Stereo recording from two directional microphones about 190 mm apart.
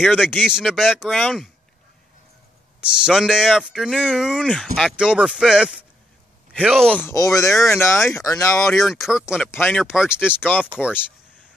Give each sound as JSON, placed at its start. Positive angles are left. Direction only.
{"t": 0.0, "sound": "speech", "side_deg": -5}
{"t": 2.8, "sound": "speech", "side_deg": 0}
{"t": 7.1, "sound": "speech", "side_deg": 15}
{"t": 8.7, "sound": "speech", "side_deg": 0}
{"t": 9.4, "sound": "speech", "side_deg": 10}
{"t": 9.8, "sound": "speech", "side_deg": -5}
{"t": 10.4, "sound": "speech", "side_deg": 10}